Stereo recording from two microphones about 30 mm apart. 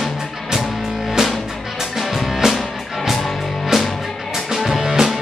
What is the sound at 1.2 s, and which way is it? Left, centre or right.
Music, centre.